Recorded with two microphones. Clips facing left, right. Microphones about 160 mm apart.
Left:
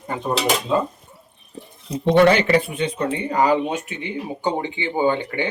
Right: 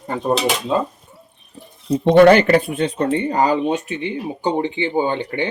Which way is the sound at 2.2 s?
50° right (ahead or behind).